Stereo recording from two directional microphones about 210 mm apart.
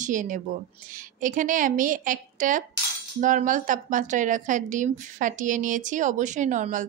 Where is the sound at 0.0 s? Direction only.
40° right (ahead or behind).